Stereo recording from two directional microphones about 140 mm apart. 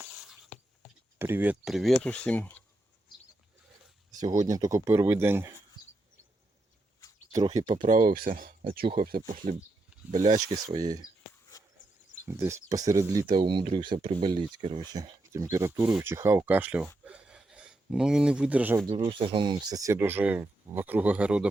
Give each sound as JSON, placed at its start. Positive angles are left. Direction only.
{"t": 1.2, "sound": "speech", "side_deg": -15}
{"t": 1.6, "sound": "speech", "side_deg": 0}
{"t": 4.1, "sound": "speech", "side_deg": -25}
{"t": 7.8, "sound": "speech", "side_deg": -70}
{"t": 10.1, "sound": "speech", "side_deg": -60}
{"t": 10.3, "sound": "speech", "side_deg": -25}
{"t": 12.2, "sound": "speech", "side_deg": -20}
{"t": 17.1, "sound": "gasp", "side_deg": -5}
{"t": 18.9, "sound": "speech", "side_deg": -35}
{"t": 20.0, "sound": "speech", "side_deg": -15}